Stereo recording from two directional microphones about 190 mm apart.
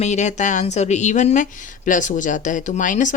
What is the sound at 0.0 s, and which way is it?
A woman's voice, 40° left (ahead or behind).